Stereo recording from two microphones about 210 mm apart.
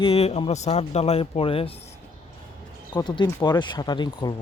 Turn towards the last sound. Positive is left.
turn(degrees=20)  # may be behind; listen again after turning